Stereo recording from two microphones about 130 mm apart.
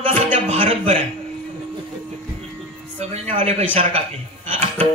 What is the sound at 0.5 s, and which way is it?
Speech, 50° right (ahead or behind).